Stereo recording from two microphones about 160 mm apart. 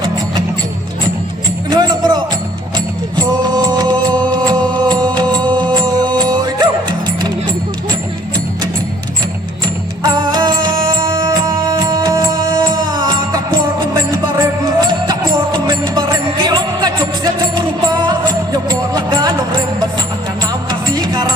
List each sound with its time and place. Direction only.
1.7 s music: 25° right (ahead or behind)
10.0 s music: 25° right (ahead or behind)
20.7 s music: 25° right (ahead or behind)